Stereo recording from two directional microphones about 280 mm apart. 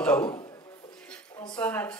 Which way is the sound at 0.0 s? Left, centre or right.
Centre.